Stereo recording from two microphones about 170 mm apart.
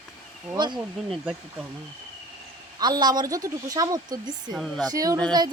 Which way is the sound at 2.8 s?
25° right (ahead or behind).